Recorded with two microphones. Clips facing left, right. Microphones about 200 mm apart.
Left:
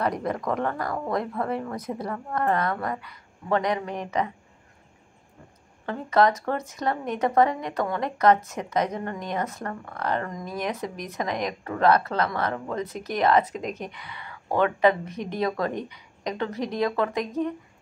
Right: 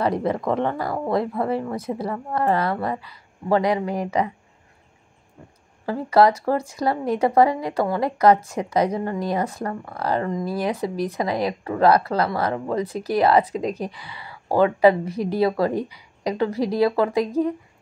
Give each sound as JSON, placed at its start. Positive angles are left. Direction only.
{"t": 0.0, "sound": "speech", "side_deg": -30}
{"t": 5.9, "sound": "speech", "side_deg": -35}